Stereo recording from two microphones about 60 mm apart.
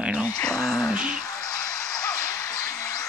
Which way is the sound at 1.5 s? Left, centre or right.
Left.